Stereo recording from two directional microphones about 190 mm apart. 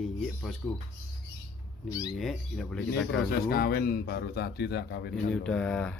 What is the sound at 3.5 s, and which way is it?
Speech, 55° left (ahead or behind).